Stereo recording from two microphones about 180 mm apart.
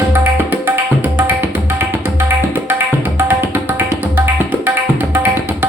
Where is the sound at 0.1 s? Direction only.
10° right (ahead or behind).